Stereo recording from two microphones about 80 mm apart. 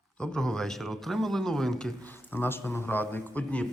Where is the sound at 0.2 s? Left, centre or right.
Centre.